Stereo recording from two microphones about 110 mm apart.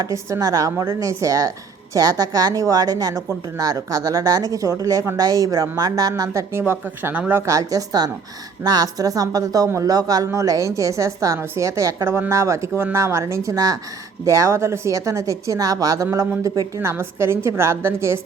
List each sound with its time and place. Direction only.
0.0 s speech: 30° right (ahead or behind)
7.4 s a woman's voice: 30° right (ahead or behind)